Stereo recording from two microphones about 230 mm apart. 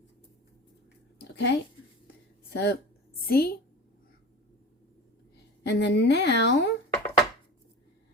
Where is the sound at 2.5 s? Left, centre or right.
Left.